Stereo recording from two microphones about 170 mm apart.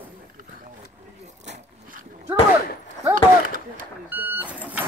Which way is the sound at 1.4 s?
45° right (ahead or behind).